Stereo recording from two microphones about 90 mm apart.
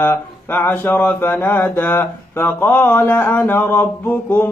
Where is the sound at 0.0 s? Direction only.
20° left (ahead or behind).